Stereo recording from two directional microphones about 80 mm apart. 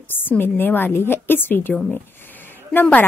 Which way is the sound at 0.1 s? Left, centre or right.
Left.